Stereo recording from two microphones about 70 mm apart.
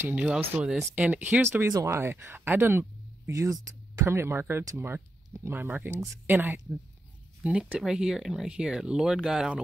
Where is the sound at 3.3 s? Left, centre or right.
Right.